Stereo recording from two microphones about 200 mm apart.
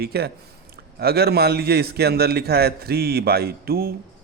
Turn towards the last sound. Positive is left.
turn(degrees=-50)  # may be behind; listen again after turning